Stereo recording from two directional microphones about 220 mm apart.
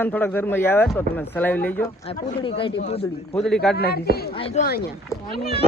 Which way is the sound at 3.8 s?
45° left (ahead or behind).